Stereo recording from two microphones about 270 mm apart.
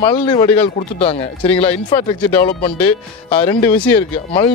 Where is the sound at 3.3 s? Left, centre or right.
Centre.